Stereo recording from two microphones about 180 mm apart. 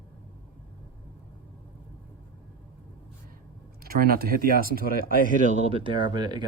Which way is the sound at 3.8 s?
55° right (ahead or behind).